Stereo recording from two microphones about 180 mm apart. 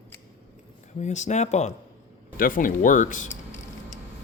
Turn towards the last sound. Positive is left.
turn(degrees=45)  # may be behind; listen again after turning